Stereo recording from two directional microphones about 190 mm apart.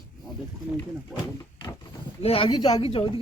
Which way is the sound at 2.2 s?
30° left (ahead or behind).